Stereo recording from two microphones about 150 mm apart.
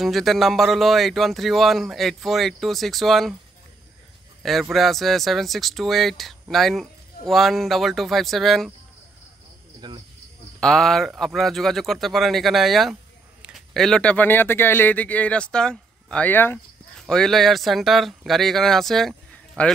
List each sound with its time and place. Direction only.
0.0 s speech: centre (ahead or behind)
4.4 s speech: centre (ahead or behind)
9.8 s speech: 30° right (ahead or behind)
10.6 s speech: centre (ahead or behind)